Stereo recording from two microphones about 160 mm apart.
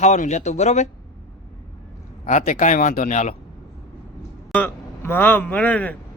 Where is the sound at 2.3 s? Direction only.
55° left (ahead or behind).